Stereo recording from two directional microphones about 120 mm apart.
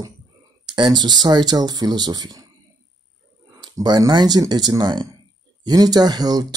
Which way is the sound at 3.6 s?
35° right (ahead or behind).